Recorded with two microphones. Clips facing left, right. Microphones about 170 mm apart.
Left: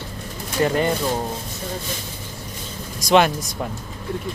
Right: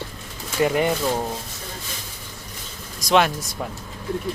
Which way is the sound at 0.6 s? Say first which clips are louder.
Even; 15° right (ahead or behind).